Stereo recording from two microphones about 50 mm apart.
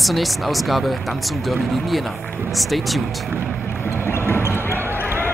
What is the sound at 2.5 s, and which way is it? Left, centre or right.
Speech, centre.